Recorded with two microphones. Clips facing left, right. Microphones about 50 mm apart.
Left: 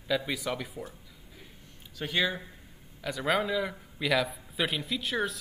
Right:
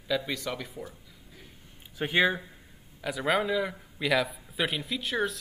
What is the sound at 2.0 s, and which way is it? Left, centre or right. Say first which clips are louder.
Speech: right 4 dB; right.